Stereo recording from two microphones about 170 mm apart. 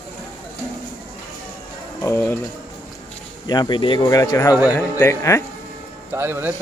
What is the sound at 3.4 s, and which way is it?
Speech, 25° left (ahead or behind).